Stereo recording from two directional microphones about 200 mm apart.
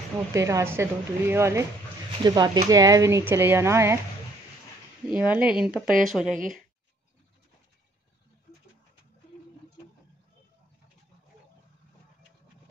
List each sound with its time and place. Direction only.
0.3 s speech: 15° right (ahead or behind)
5.1 s speech: 5° right (ahead or behind)